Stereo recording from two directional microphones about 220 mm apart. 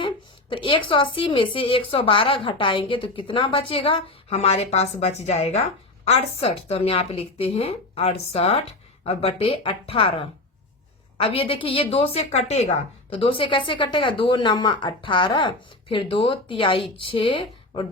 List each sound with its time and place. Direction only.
0.5 s a woman's voice: 20° left (ahead or behind)